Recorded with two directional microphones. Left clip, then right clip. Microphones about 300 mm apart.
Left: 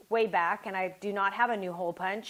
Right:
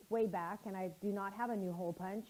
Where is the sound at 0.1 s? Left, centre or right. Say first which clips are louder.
Left 11 dB; centre.